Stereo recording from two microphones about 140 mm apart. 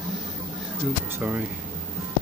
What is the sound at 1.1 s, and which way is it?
Speech, 10° right (ahead or behind).